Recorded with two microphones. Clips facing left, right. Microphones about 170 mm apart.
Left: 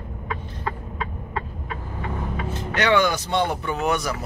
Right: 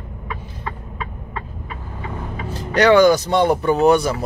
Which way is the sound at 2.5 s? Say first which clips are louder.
Right 7 dB; 40° right (ahead or behind).